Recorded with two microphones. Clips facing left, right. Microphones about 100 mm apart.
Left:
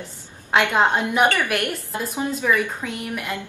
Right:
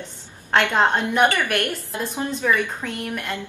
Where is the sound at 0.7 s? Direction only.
5° left (ahead or behind).